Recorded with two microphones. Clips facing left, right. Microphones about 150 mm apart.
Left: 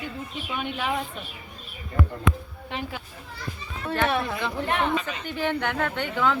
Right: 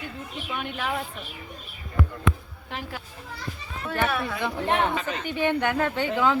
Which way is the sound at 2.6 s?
Centre (ahead or behind).